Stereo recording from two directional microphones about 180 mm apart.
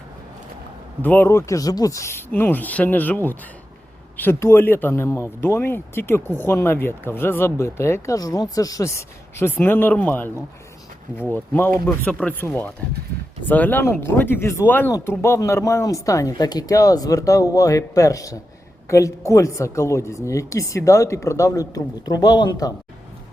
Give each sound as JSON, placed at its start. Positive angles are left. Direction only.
{"t": 1.0, "sound": "speech", "side_deg": 10}